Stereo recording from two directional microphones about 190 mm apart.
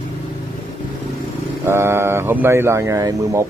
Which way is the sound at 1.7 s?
15° right (ahead or behind).